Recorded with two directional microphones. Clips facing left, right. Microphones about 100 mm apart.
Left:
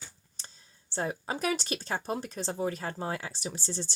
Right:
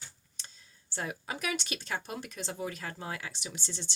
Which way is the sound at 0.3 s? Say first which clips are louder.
Left 1 dB; 35° left (ahead or behind).